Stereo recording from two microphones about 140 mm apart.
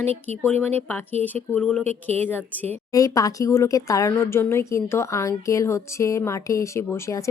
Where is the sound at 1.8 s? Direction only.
50° right (ahead or behind).